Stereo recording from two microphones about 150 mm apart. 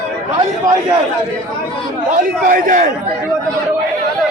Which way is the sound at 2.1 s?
65° right (ahead or behind).